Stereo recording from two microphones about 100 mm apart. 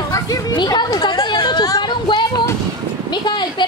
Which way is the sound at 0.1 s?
40° left (ahead or behind).